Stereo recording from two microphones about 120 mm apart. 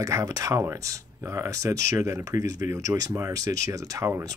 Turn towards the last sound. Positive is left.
turn(degrees=-25)  # may be behind; listen again after turning